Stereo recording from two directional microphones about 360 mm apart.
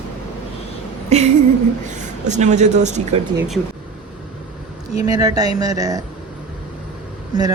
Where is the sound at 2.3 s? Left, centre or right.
Centre.